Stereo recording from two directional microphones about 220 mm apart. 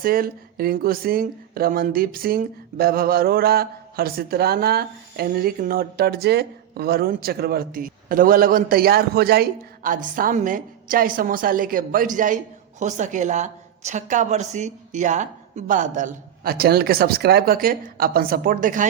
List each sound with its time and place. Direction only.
0.0 s a woman's voice: 40° right (ahead or behind)